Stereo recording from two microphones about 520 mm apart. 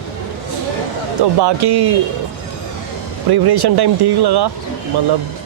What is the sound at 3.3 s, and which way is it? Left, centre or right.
Speech, right.